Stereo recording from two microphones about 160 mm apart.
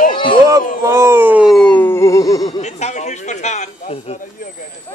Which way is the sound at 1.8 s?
15° left (ahead or behind).